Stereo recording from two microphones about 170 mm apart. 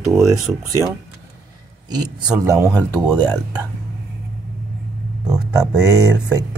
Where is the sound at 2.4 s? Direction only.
20° right (ahead or behind).